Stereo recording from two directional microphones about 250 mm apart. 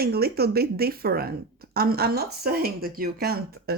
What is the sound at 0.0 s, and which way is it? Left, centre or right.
Speech, right.